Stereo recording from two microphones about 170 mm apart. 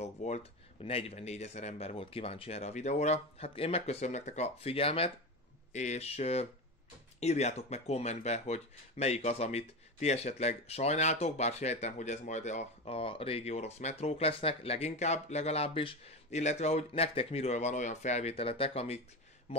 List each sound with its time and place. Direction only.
0.0 s speech: 40° left (ahead or behind)